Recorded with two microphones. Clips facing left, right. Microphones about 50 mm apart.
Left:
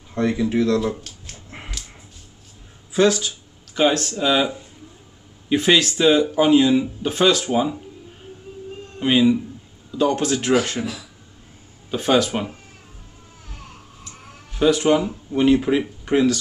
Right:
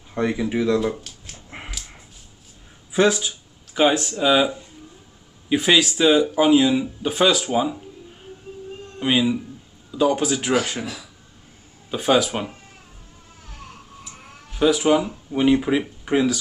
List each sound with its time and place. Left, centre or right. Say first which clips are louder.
0.1 s speech: left 2 dB; centre
1.3 s dog: right 2 dB; centre
2.9 s speech: left 1 dB; centre
5.5 s speech: left 1 dB; centre
9.0 s speech: left 3 dB; centre
11.9 s speech: even; centre
14.6 s speech: left 1 dB; centre